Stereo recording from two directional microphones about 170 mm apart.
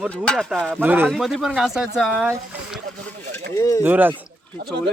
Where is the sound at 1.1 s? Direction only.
Centre (ahead or behind).